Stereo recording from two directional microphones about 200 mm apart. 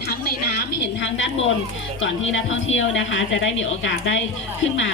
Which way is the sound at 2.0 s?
75° left (ahead or behind).